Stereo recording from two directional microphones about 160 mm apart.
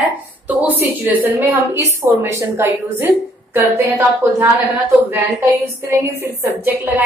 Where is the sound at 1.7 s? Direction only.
20° right (ahead or behind).